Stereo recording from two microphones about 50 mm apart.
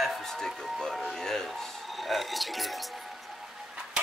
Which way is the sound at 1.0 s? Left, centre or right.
Centre.